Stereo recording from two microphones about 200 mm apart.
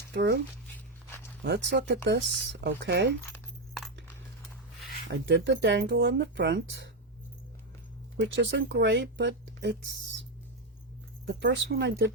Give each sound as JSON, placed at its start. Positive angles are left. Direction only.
{"t": 0.1, "sound": "speech", "side_deg": -55}
{"t": 1.5, "sound": "speech", "side_deg": -60}
{"t": 3.3, "sound": "coin", "side_deg": 0}
{"t": 5.1, "sound": "speech", "side_deg": -60}
{"t": 8.2, "sound": "speech", "side_deg": -65}
{"t": 11.3, "sound": "speech", "side_deg": -60}